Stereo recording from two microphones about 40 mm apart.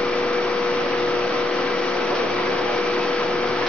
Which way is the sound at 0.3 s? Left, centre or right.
Left.